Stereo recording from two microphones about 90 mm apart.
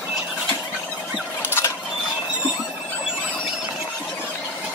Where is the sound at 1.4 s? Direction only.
25° left (ahead or behind).